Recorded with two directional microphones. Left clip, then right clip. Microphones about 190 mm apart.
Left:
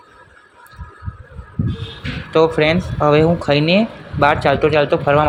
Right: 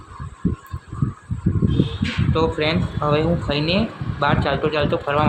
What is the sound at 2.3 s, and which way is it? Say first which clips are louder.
Speech: left 7 dB; 30° left (ahead or behind).